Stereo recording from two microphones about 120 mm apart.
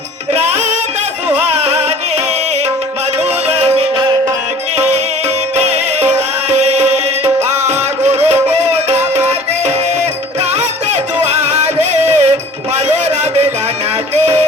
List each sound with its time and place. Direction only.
0.3 s music: 70° right (ahead or behind)
3.4 s music: 60° right (ahead or behind)
5.5 s music: 65° right (ahead or behind)
10.5 s music: 70° right (ahead or behind)